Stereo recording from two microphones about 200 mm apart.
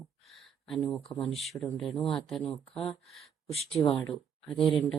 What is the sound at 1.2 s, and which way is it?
Speech, centre (ahead or behind).